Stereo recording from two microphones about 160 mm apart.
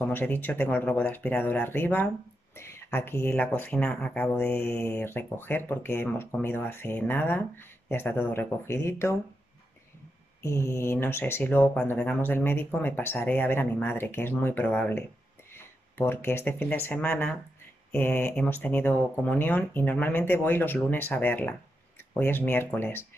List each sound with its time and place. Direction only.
0.0 s speech: 10° left (ahead or behind)
10.4 s speech: 20° left (ahead or behind)